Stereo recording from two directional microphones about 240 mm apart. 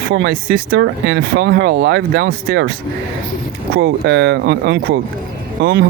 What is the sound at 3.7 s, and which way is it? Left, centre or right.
Speech, right.